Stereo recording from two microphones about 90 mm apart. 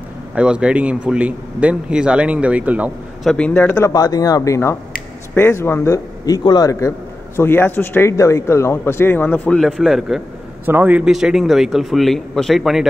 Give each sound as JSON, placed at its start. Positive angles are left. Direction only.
{"t": 0.3, "sound": "a man's voice", "side_deg": -10}
{"t": 3.3, "sound": "speech", "side_deg": 15}
{"t": 3.8, "sound": "speech", "side_deg": 45}
{"t": 5.3, "sound": "a man's voice", "side_deg": 25}
{"t": 6.2, "sound": "speech", "side_deg": 45}
{"t": 7.3, "sound": "a man's voice", "side_deg": 25}
{"t": 9.6, "sound": "a man's voice", "side_deg": 0}
{"t": 10.6, "sound": "a man's voice", "side_deg": -20}
{"t": 11.1, "sound": "a man's voice", "side_deg": -5}